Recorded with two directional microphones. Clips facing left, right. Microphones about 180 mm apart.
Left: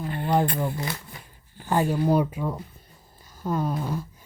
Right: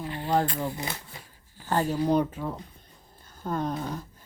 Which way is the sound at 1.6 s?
10° left (ahead or behind).